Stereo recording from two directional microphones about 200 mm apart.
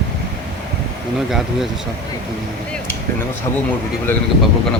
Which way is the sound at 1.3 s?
Centre (ahead or behind).